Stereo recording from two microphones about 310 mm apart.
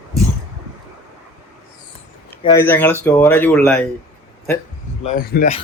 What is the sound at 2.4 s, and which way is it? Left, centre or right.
Speech, centre.